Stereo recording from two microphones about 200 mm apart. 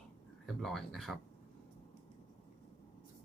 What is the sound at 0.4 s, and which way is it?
Speech, centre (ahead or behind).